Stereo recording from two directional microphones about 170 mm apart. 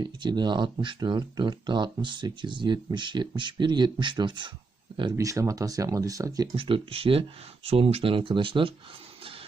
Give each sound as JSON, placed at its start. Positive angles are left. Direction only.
{"t": 0.0, "sound": "speech", "side_deg": -25}